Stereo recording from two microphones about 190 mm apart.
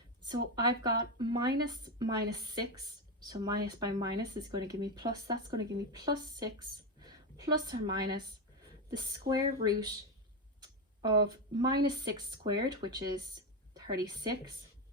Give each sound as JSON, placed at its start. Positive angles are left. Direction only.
{"t": 0.3, "sound": "speech", "side_deg": -20}